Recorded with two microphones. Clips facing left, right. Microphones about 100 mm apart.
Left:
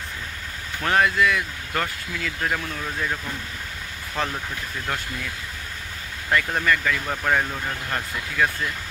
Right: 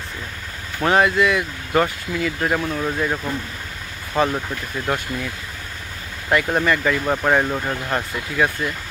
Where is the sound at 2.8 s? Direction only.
35° right (ahead or behind).